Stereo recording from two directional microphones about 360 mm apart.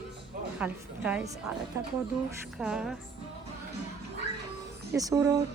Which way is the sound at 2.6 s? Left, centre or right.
Centre.